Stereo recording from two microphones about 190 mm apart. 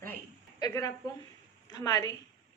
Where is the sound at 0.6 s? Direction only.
20° left (ahead or behind).